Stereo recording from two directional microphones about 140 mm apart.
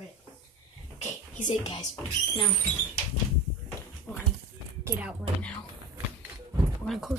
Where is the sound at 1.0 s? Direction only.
60° left (ahead or behind).